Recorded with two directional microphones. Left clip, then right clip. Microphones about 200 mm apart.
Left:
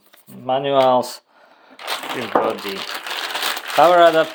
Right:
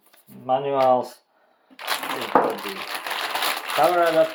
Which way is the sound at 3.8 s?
50° left (ahead or behind).